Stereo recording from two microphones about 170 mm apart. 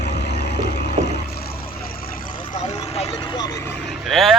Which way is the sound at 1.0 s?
75° left (ahead or behind).